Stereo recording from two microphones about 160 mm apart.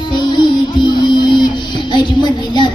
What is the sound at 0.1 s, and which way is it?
Music, 30° left (ahead or behind).